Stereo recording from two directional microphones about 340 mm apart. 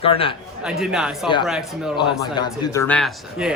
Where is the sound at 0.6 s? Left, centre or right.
Centre.